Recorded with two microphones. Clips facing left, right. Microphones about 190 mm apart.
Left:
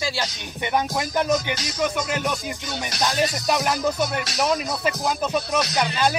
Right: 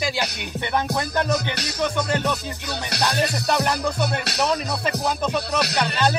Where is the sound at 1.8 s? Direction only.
10° left (ahead or behind).